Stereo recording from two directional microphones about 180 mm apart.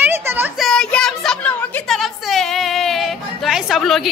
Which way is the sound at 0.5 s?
Centre (ahead or behind).